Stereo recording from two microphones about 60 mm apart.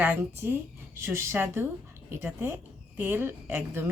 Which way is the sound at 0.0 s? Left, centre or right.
Right.